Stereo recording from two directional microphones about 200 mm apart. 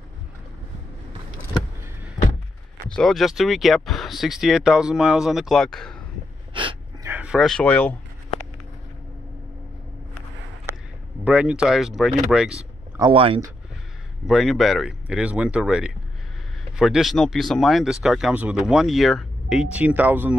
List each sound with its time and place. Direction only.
2.9 s speech: centre (ahead or behind)
6.5 s gasp: 25° right (ahead or behind)
7.1 s speech: 5° right (ahead or behind)
11.2 s speech: 5° right (ahead or behind)
12.9 s speech: 25° right (ahead or behind)
14.2 s speech: centre (ahead or behind)